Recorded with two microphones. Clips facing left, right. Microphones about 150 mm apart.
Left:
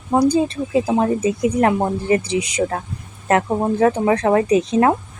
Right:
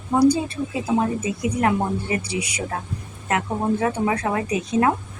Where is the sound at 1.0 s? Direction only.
35° left (ahead or behind).